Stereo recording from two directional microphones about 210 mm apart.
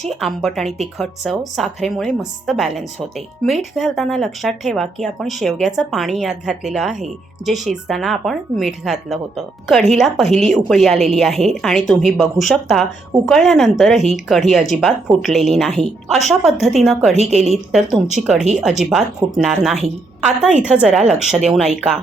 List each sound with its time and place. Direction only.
0.0 s a woman's voice: centre (ahead or behind)
17.2 s a woman's voice: 30° right (ahead or behind)
17.7 s a woman's voice: centre (ahead or behind)